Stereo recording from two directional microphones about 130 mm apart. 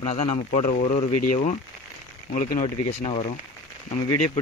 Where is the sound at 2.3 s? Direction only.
90° left.